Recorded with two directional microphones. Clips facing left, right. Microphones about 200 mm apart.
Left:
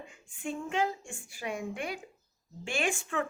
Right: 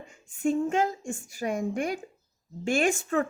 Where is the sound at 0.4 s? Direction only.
45° right (ahead or behind).